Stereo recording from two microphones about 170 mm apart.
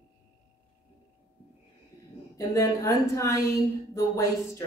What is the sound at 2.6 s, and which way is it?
Speech, 15° left (ahead or behind).